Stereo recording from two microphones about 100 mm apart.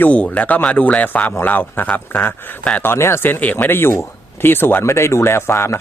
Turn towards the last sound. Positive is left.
turn(degrees=25)  # may be behind; listen again after turning